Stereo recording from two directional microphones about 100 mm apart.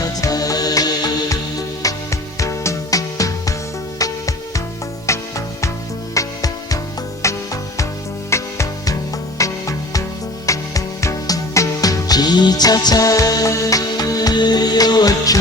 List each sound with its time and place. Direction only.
0.0 s music: 40° left (ahead or behind)